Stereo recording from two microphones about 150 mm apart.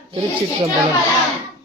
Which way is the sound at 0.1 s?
35° right (ahead or behind).